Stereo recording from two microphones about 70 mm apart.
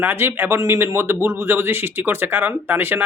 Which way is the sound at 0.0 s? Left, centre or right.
Right.